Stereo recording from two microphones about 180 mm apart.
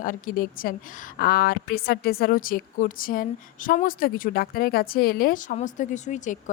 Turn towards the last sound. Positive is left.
turn(degrees=45)  # may be behind; listen again after turning